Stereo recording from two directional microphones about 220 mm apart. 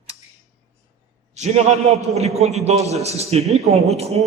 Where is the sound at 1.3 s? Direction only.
30° right (ahead or behind).